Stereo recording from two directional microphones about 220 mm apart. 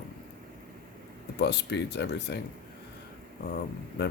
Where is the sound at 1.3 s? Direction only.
50° left (ahead or behind).